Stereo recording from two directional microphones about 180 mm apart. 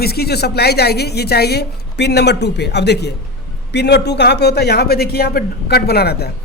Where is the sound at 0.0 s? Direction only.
60° left (ahead or behind).